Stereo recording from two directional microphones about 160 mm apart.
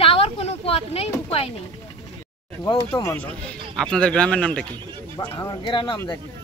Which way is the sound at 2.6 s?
20° left (ahead or behind).